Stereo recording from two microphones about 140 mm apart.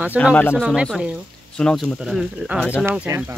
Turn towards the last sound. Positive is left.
turn(degrees=-15)  # may be behind; listen again after turning